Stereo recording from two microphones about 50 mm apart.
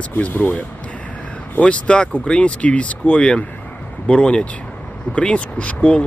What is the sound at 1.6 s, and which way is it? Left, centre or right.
Speech, left.